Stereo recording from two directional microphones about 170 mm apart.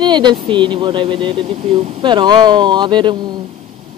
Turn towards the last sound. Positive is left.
turn(degrees=-25)  # may be behind; listen again after turning